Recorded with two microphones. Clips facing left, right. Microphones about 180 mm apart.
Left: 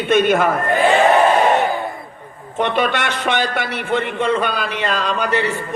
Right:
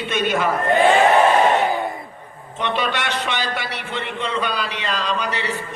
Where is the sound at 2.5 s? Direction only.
50° left (ahead or behind).